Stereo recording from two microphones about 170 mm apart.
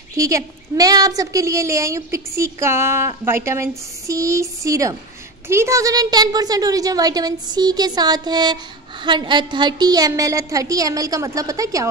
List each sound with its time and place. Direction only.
0.1 s a woman's voice: 20° right (ahead or behind)